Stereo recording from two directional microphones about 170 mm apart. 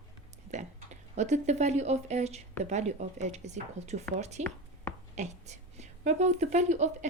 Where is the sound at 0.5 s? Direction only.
45° right (ahead or behind).